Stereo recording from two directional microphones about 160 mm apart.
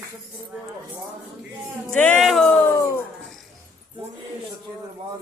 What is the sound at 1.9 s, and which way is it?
Music, 10° left (ahead or behind).